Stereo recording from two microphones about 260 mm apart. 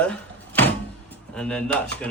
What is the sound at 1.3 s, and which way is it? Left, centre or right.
Speech, centre.